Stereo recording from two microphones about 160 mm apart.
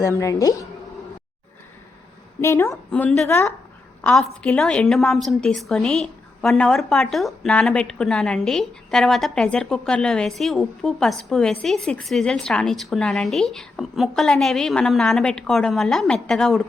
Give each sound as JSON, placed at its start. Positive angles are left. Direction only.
{"t": 0.0, "sound": "speech", "side_deg": 20}
{"t": 2.4, "sound": "a woman's voice", "side_deg": 15}